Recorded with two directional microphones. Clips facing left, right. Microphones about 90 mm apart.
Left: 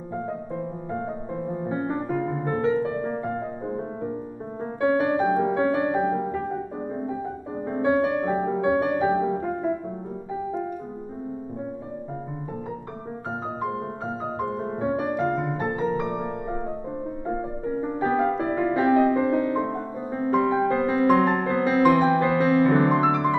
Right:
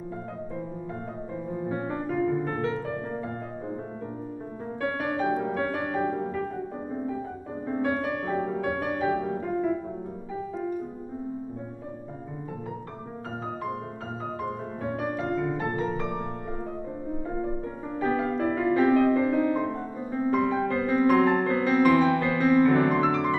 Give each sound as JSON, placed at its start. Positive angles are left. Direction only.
{"t": 1.7, "sound": "music", "side_deg": 25}
{"t": 4.7, "sound": "music", "side_deg": 20}
{"t": 7.6, "sound": "music", "side_deg": 20}
{"t": 14.8, "sound": "music", "side_deg": 25}
{"t": 22.9, "sound": "piano", "side_deg": 20}